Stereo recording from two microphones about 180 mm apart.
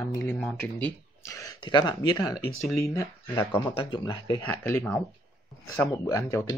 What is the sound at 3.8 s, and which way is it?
Speech, 25° left (ahead or behind).